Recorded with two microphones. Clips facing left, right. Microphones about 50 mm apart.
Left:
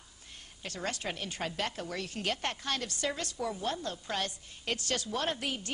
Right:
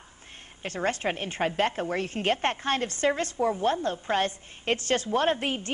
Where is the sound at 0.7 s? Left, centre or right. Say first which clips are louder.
Right 9 dB; right.